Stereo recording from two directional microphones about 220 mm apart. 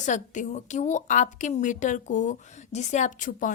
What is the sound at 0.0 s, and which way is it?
A woman's voice, 35° left (ahead or behind).